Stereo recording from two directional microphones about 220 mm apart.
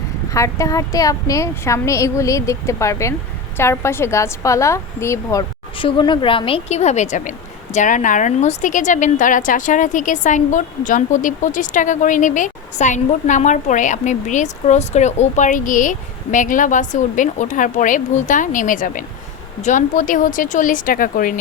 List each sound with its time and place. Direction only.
0.3 s a woman's voice: 15° left (ahead or behind); by 21.3 s 40° left (ahead or behind)